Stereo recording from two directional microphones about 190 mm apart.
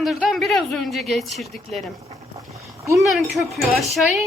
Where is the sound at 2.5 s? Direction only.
15° right (ahead or behind).